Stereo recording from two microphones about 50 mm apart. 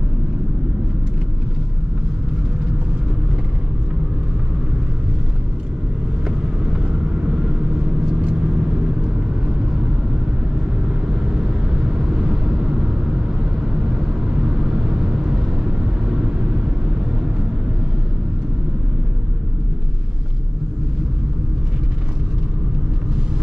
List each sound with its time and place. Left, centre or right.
6.2 s vehicle: centre
10.9 s vehicle: centre